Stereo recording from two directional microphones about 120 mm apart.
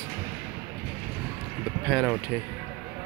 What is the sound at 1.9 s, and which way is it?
Speech, 10° right (ahead or behind).